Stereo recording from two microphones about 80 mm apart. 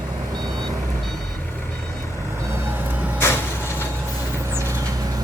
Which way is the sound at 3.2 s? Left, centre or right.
Left.